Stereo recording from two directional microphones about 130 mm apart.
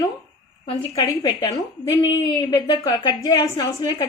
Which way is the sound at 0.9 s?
25° left (ahead or behind).